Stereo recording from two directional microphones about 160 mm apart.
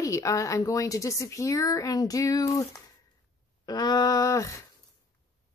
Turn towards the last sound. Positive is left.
turn(degrees=20)  # may be behind; listen again after turning